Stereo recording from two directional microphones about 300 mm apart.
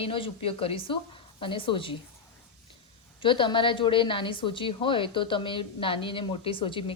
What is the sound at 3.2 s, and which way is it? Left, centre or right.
A woman's voice, centre.